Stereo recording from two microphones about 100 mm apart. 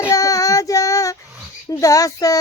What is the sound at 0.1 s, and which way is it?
Child singing, 35° left (ahead or behind).